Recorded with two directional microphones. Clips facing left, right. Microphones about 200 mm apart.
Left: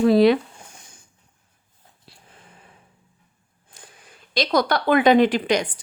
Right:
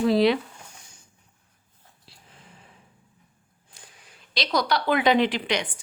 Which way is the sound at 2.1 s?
55° left (ahead or behind).